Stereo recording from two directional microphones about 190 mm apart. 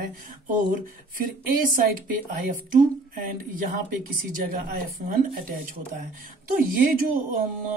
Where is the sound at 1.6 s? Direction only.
45° right (ahead or behind).